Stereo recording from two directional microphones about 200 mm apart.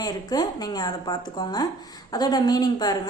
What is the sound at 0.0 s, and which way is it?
A woman's voice, 20° left (ahead or behind).